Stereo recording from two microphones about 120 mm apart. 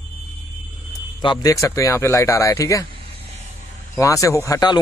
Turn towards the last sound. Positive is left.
turn(degrees=30)  # may be behind; listen again after turning